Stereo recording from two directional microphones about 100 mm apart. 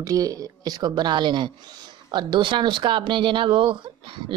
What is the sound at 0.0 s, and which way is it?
A woman's voice, 35° right (ahead or behind).